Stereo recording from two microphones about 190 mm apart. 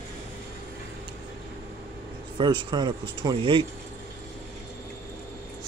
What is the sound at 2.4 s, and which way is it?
Speech, 25° right (ahead or behind).